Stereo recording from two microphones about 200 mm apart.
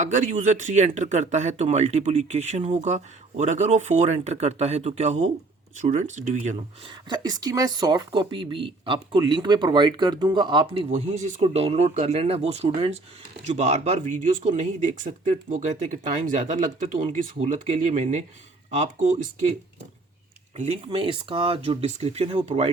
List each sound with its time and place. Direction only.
0.0 s speech: 35° right (ahead or behind)
7.1 s speech: 20° right (ahead or behind); by 18.2 s 35° right (ahead or behind)
20.6 s speech: 30° right (ahead or behind)